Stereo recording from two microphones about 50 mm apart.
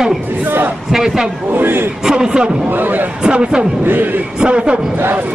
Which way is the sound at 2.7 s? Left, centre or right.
Right.